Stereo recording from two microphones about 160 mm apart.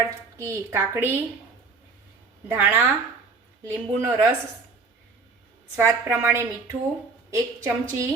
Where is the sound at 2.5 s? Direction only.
10° right (ahead or behind).